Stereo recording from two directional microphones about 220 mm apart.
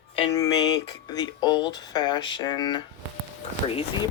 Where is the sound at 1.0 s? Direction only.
20° left (ahead or behind).